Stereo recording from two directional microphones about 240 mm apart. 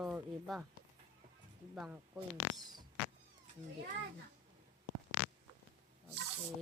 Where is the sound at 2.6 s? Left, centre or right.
Centre.